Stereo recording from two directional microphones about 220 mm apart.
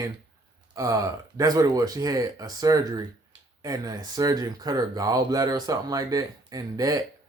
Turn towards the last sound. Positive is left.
turn(degrees=-15)  # may be behind; listen again after turning